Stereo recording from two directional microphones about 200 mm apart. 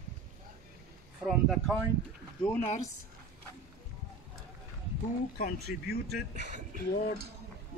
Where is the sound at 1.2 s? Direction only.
Centre (ahead or behind).